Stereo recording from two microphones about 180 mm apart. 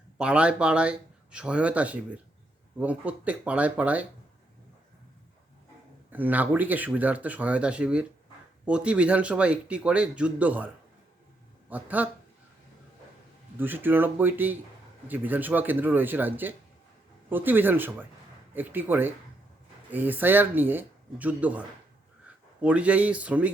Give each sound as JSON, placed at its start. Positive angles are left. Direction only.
{"t": 0.2, "sound": "speech", "side_deg": -5}
{"t": 6.1, "sound": "speech", "side_deg": -10}
{"t": 11.7, "sound": "speech", "side_deg": -10}
{"t": 13.6, "sound": "speech", "side_deg": -10}